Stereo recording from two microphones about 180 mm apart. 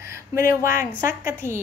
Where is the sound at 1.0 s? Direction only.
45° left (ahead or behind).